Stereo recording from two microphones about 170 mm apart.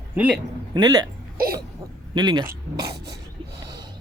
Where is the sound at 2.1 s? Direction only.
25° right (ahead or behind).